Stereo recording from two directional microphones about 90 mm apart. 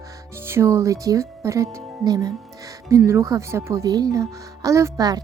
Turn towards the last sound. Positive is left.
turn(degrees=-40)  # may be behind; listen again after turning